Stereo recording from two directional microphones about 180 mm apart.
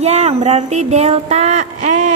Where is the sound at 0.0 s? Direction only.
35° right (ahead or behind).